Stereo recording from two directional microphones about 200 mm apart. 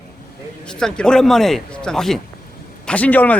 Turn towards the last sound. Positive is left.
turn(degrees=10)  # may be behind; listen again after turning